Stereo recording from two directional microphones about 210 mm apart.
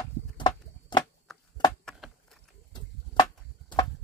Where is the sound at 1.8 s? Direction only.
Centre (ahead or behind).